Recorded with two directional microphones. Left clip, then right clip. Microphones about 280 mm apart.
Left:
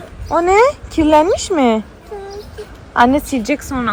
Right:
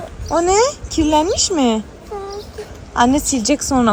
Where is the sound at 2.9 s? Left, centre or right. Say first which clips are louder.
Left 3 dB; centre.